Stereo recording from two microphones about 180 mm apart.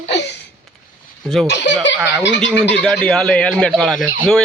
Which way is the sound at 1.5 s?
85° left.